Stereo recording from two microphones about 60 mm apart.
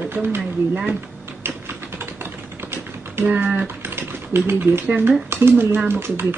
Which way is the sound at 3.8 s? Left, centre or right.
Right.